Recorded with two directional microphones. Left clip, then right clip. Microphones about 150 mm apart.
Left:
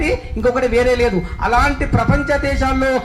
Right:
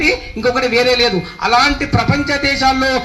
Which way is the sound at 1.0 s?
20° right (ahead or behind).